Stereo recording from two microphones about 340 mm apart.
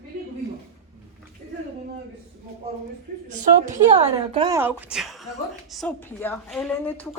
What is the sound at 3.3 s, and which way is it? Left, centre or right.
A woman's voice, right.